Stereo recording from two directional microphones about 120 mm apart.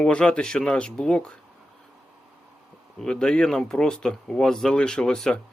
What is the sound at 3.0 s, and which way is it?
Speech, 5° left (ahead or behind).